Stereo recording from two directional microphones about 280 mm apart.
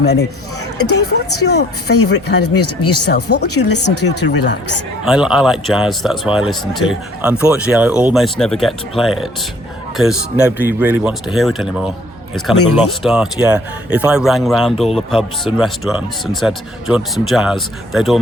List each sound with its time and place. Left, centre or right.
0.0 s speech: left
0.8 s speech: left
1.5 s speech: left
2.4 s speech: left
4.0 s speech: left
5.0 s speech: centre
13.0 s speech: centre